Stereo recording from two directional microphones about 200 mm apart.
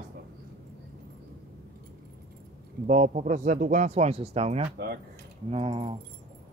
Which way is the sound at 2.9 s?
35° right (ahead or behind).